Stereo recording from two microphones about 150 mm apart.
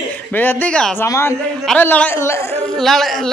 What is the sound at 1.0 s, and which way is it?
A man's voice, 20° left (ahead or behind).